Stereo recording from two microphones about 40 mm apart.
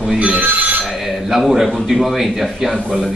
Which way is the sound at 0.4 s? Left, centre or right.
Right.